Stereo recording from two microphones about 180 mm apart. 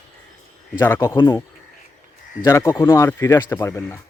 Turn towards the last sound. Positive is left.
turn(degrees=15)  # may be behind; listen again after turning